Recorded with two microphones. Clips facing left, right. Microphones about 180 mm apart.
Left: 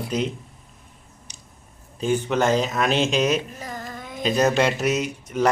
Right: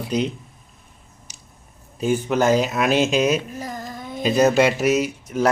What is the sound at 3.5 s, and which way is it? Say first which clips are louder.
Child singing: right 3 dB; 35° right (ahead or behind).